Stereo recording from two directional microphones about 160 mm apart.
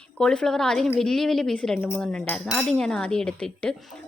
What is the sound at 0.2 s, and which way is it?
Speech, 5° left (ahead or behind).